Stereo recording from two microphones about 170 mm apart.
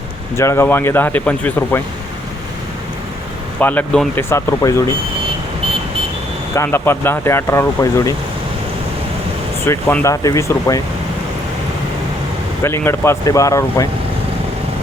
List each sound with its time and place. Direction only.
0.3 s speech: 15° left (ahead or behind)
3.6 s speech: 10° left (ahead or behind)
6.6 s speech: 15° left (ahead or behind)
9.6 s speech: 15° left (ahead or behind)
12.6 s speech: 15° left (ahead or behind)